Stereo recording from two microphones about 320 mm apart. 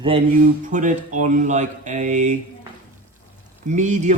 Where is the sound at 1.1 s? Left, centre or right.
Right.